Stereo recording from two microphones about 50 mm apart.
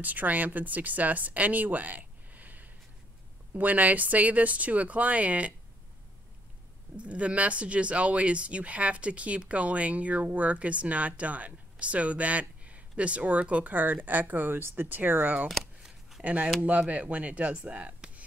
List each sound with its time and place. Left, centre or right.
0.0 s speech: right
7.0 s speech: right
15.8 s shuffling cards: centre
16.6 s speech: right